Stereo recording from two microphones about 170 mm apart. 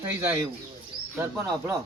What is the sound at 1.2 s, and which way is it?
Speech, 15° right (ahead or behind).